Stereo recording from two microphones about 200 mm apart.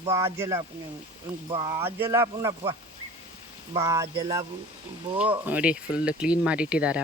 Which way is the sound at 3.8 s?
15° right (ahead or behind).